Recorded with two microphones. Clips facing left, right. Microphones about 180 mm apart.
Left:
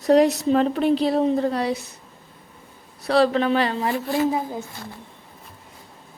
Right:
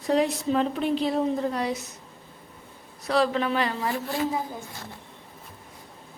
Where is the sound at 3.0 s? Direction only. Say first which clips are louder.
Left 5 dB; 30° left (ahead or behind).